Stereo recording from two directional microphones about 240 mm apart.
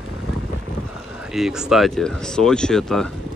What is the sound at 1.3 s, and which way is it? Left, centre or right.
Speech, centre.